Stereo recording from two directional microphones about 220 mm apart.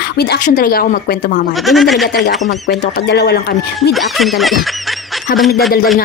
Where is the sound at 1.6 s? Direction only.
Centre (ahead or behind).